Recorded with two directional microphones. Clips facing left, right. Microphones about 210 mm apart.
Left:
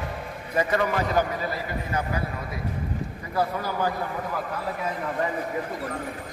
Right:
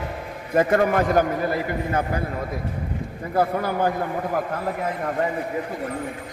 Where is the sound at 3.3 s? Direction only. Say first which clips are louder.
Right 5 dB; 55° right (ahead or behind).